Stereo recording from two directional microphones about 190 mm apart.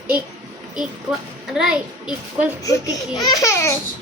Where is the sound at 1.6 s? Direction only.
5° right (ahead or behind).